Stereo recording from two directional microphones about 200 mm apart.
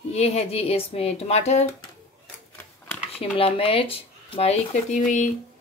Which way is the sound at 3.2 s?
30° left (ahead or behind).